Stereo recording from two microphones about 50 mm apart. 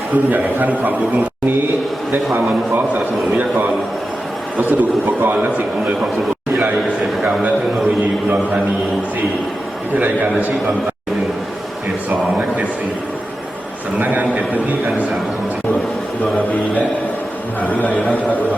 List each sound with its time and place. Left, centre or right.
0.1 s a man's voice: right
3.3 s a man's voice: right
7.4 s a man's voice: right
9.9 s a man's voice: right
14.0 s a man's voice: right
17.6 s a man's voice: left